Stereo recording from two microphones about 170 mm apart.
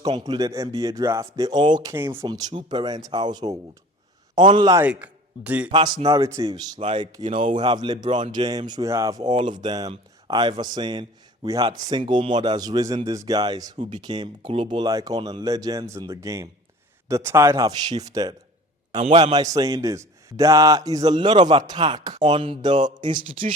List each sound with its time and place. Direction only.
0.0 s speech: 25° right (ahead or behind)
2.2 s speech: 25° right (ahead or behind)
4.8 s a man's voice: 10° right (ahead or behind)
5.7 s speech: 25° right (ahead or behind)
18.9 s a man's voice: 40° right (ahead or behind)
19.2 s speech: 20° right (ahead or behind)
23.2 s speech: 50° right (ahead or behind)